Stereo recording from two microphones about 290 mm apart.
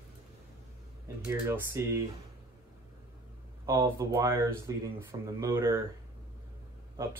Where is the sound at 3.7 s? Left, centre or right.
Centre.